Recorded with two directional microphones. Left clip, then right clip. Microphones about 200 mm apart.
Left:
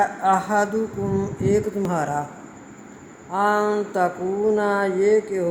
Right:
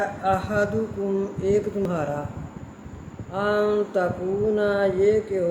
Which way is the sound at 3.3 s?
20° left (ahead or behind).